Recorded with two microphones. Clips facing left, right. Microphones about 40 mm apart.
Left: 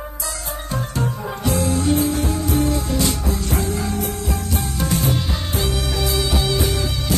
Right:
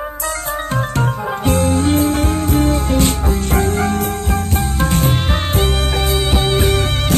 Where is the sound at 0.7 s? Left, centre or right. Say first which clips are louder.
Right 3 dB; right.